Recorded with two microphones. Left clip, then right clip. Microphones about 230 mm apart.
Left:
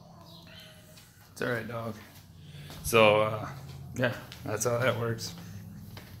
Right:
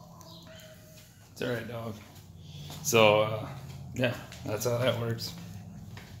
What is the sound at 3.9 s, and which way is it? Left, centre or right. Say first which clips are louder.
Speech: even; centre.